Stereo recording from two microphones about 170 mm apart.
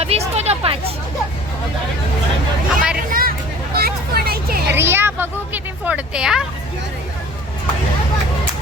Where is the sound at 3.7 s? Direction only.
65° right (ahead or behind).